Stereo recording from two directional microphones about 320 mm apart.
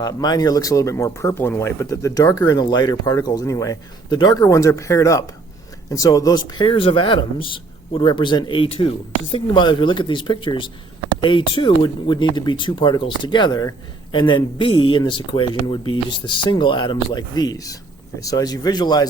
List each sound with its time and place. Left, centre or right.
0.0 s speech: centre